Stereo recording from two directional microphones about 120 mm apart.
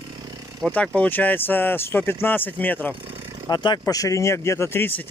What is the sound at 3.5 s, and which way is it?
Speech, 35° left (ahead or behind).